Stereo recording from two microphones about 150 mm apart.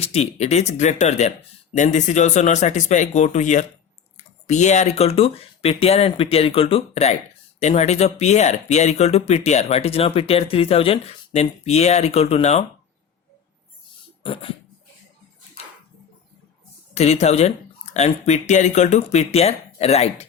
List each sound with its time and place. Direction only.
0.0 s speech: 45° left (ahead or behind)
16.9 s speech: 45° left (ahead or behind)